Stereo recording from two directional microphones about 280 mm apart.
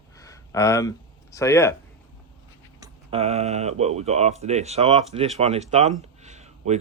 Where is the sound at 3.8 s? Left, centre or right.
Right.